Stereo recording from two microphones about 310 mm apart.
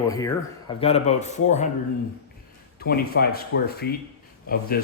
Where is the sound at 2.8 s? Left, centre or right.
Left.